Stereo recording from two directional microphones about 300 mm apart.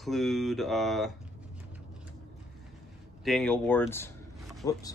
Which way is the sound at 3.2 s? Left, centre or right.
Centre.